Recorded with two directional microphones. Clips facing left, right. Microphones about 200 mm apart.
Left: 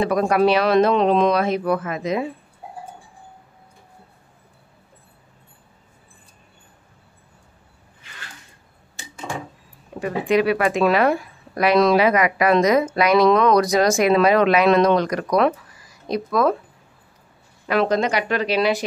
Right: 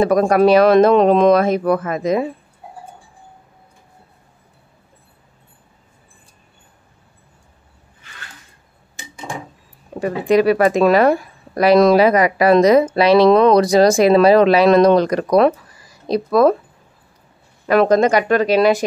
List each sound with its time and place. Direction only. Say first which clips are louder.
0.0 s speech: right 5 dB; 45° right (ahead or behind)
9.9 s speech: right 4 dB; 35° right (ahead or behind)
17.6 s speech: right 6 dB; 45° right (ahead or behind)